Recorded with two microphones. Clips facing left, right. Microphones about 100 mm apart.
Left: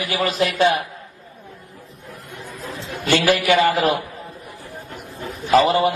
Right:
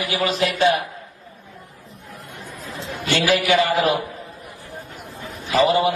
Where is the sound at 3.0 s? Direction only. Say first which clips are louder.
Left 3 dB; 50° left (ahead or behind).